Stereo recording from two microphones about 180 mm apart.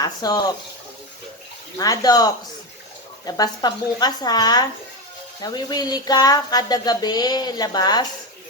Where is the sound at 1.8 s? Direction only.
20° left (ahead or behind).